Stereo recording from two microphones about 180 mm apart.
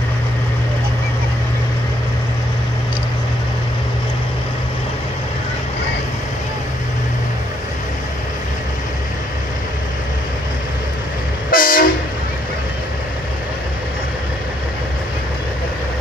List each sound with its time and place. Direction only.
11.5 s train: 50° left (ahead or behind)